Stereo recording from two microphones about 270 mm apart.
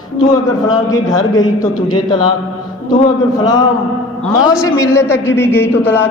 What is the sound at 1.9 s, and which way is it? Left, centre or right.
Speech, centre.